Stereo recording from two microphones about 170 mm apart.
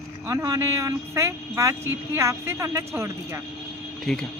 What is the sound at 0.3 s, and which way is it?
A woman's voice, 20° right (ahead or behind).